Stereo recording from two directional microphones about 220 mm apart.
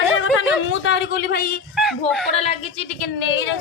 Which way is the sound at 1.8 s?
Centre (ahead or behind).